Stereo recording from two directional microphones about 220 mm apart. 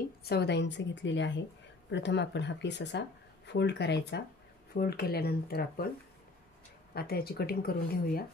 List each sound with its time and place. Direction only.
0.2 s speech: 45° left (ahead or behind)
6.9 s speech: 45° left (ahead or behind)